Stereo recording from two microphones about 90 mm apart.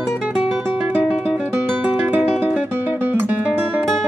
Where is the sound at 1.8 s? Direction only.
15° right (ahead or behind).